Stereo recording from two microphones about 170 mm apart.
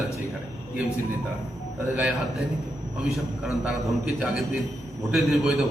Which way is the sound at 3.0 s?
Centre (ahead or behind).